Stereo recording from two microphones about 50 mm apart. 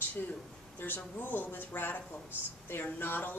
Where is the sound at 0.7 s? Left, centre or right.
Left.